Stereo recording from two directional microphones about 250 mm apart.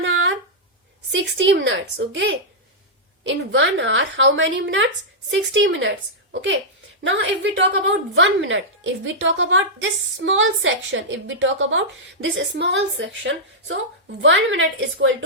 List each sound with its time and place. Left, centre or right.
0.0 s a sound: right
1.1 s speech: right
7.0 s speech: right